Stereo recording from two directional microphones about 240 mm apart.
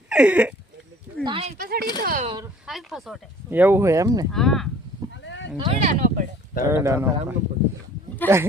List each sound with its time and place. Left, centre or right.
0.1 s speech: centre
1.2 s a sound: right
1.5 s speech: right
2.6 s speech: centre
4.3 s speech: centre
5.2 s a sound: left
5.5 s speech: right
6.7 s speech: centre
8.2 s a sound: centre